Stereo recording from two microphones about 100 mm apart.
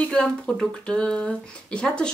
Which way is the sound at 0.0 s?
10° left (ahead or behind).